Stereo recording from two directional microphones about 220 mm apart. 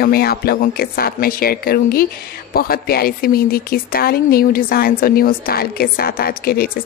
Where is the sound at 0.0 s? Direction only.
45° left (ahead or behind).